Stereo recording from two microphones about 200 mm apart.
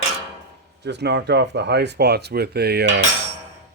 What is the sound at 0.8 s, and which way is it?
Speech, 60° right (ahead or behind).